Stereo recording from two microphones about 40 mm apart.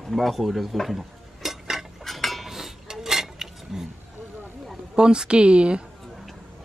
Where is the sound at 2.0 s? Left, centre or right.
Centre.